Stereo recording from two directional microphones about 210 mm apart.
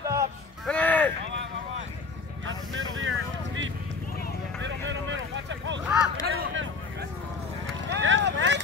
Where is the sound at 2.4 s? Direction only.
65° right (ahead or behind).